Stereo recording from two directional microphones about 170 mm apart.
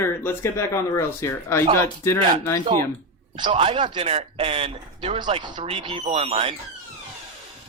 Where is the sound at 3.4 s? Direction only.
30° right (ahead or behind).